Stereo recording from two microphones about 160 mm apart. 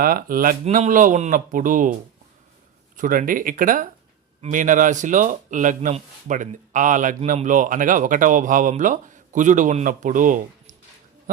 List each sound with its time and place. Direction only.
0.0 s speech: 65° right (ahead or behind)
0.6 s speech: 50° right (ahead or behind)
2.9 s speech: 55° right (ahead or behind)